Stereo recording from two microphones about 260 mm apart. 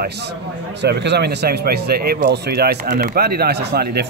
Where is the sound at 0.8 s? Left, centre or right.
Right.